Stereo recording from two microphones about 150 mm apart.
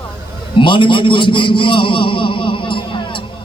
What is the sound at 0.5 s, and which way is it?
A man's voice, 35° left (ahead or behind).